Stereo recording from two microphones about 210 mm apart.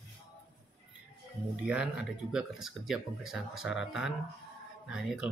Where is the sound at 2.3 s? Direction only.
Centre (ahead or behind).